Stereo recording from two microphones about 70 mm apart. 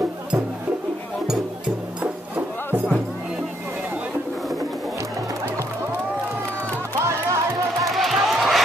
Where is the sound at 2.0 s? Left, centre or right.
Right.